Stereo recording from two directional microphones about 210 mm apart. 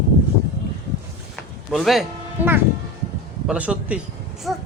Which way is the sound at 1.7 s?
Centre (ahead or behind).